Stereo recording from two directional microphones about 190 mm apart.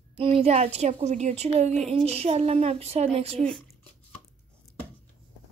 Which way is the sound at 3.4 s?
5° left (ahead or behind).